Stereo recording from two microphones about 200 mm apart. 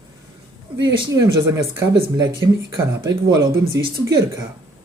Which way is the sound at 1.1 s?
15° right (ahead or behind).